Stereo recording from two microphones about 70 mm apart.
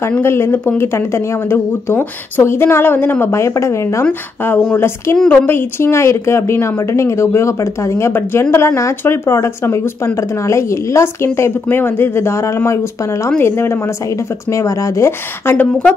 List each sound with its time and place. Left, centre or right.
0.2 s a woman's voice: left
4.0 s a woman's voice: left
14.5 s a woman's voice: left
15.5 s speech: left